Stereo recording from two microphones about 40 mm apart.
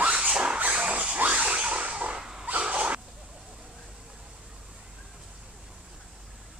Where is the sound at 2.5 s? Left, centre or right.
Right.